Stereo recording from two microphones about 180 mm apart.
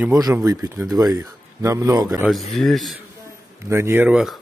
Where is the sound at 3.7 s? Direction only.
15° right (ahead or behind).